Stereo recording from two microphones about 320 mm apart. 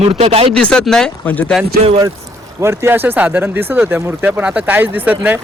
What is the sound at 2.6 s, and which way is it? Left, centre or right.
Speech, centre.